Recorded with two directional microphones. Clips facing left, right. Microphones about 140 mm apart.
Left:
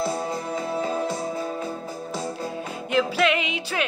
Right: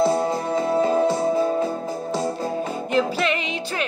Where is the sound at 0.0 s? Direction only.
30° right (ahead or behind).